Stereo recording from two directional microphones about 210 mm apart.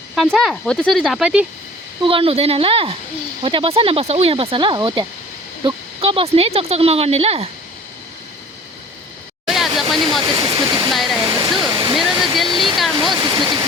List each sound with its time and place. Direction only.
0.2 s speech: centre (ahead or behind)
2.0 s speech: 25° right (ahead or behind)
9.5 s a sound: centre (ahead or behind)
9.9 s speech: centre (ahead or behind)
10.2 s speech: 25° right (ahead or behind)
10.9 s speech: centre (ahead or behind)
11.2 s speech: 20° right (ahead or behind)
12.5 s speech: centre (ahead or behind)
12.9 s speech: 20° right (ahead or behind)